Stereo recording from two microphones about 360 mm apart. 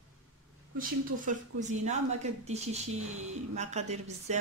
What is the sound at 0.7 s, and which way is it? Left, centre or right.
A woman's voice, right.